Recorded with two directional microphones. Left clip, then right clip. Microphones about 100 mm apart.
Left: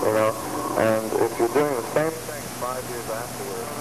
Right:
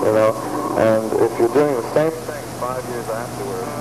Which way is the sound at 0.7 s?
15° right (ahead or behind).